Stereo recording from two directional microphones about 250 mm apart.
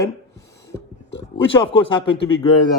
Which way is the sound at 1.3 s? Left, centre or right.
Left.